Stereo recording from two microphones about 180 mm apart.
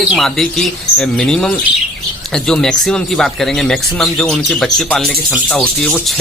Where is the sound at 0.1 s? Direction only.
Centre (ahead or behind).